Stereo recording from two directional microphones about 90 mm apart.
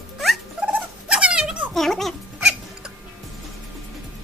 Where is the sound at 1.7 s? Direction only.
5° left (ahead or behind).